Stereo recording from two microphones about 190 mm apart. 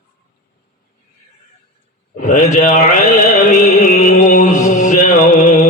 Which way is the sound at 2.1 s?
40° left (ahead or behind).